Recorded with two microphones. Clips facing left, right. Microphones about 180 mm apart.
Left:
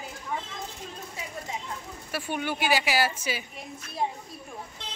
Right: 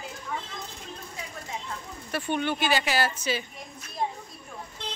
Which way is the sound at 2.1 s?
10° left (ahead or behind).